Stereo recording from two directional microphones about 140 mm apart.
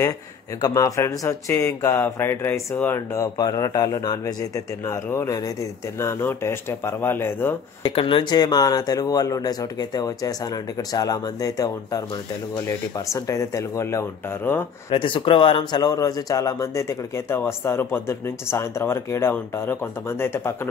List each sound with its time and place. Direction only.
0.6 s speech: 25° left (ahead or behind)
7.8 s speech: 40° left (ahead or behind); by 14.7 s 15° left (ahead or behind)
14.9 s speech: 40° left (ahead or behind); by 20.5 s 15° left (ahead or behind)